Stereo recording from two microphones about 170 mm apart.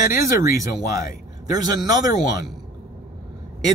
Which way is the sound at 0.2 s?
20° right (ahead or behind).